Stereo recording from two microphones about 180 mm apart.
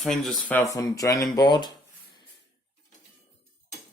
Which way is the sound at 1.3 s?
25° left (ahead or behind).